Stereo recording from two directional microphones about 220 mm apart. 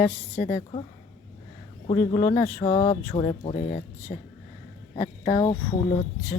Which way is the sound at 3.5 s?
40° left (ahead or behind).